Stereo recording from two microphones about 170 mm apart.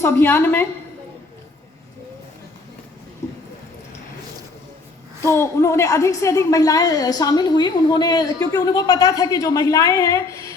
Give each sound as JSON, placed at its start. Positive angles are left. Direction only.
{"t": 0.0, "sound": "a woman's voice", "side_deg": 15}
{"t": 3.2, "sound": "a sound", "side_deg": 20}
{"t": 5.2, "sound": "a woman's voice", "side_deg": 15}